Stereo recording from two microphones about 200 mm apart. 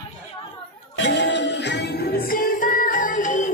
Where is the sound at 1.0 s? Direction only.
60° left (ahead or behind); by 3.5 s 40° left (ahead or behind).